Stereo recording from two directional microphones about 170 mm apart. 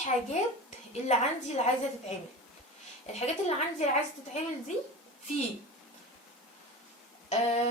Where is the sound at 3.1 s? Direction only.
40° left (ahead or behind).